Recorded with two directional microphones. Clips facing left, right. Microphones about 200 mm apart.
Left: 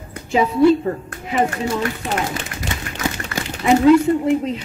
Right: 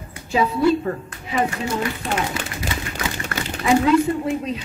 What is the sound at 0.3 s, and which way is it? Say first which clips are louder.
A woman's voice: left 4 dB; 25° left (ahead or behind).